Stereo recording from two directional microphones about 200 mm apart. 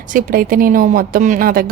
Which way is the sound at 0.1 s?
45° right (ahead or behind).